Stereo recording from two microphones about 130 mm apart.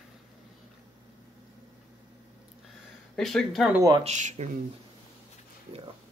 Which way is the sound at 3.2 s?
Centre (ahead or behind).